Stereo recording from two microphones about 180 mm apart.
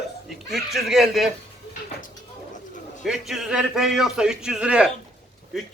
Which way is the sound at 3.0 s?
5° right (ahead or behind).